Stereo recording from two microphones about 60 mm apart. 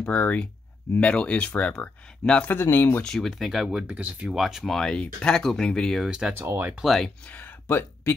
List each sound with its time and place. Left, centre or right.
0.0 s speech: left
2.6 s speech: left
3.0 s speech: centre; by 4.3 s right
4.3 s speech: centre
4.6 s speech: centre
6.0 s speech: centre
6.3 s speech: right
6.8 s speech: centre
7.2 s speech: left